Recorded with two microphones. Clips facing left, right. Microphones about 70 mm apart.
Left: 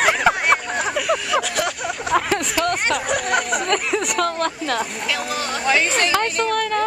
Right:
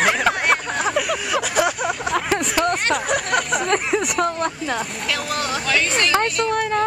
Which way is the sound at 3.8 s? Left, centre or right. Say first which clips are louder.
Right 1 dB; centre.